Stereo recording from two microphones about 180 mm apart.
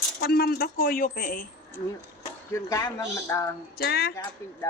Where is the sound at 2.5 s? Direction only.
15° left (ahead or behind).